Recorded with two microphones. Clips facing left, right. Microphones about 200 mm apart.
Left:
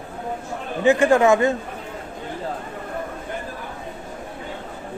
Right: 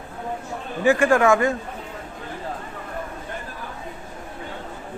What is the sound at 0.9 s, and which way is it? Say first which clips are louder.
Speech: left 2 dB; 20° left (ahead or behind).